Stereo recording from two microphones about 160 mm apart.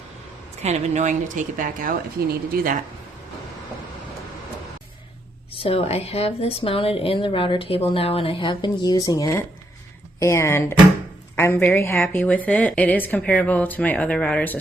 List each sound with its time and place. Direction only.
0.6 s speech: 45° right (ahead or behind)
5.5 s a woman's voice: 35° left (ahead or behind); by 14.6 s 10° left (ahead or behind)